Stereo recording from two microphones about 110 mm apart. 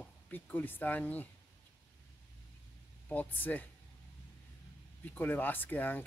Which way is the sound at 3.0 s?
15° left (ahead or behind).